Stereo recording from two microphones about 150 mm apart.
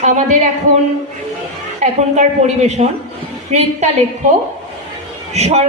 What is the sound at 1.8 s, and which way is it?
A woman's voice, 50° right (ahead or behind).